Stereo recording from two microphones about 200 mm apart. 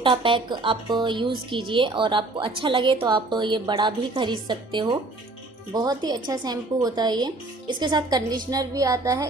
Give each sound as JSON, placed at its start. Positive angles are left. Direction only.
{"t": 0.0, "sound": "a woman's voice", "side_deg": -25}